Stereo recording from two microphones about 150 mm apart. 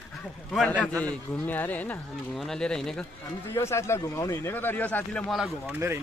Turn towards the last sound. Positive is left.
turn(degrees=0)  # may be behind; listen again after turning